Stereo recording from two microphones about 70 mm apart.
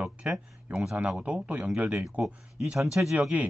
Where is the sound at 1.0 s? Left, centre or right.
Centre.